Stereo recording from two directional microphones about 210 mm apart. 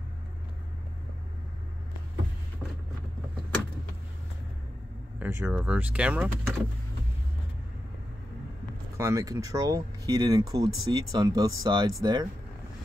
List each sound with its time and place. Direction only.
5.2 s speech: 5° right (ahead or behind)
8.9 s speech: 15° right (ahead or behind)